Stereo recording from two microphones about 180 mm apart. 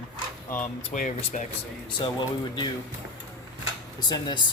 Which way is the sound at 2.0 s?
25° left (ahead or behind).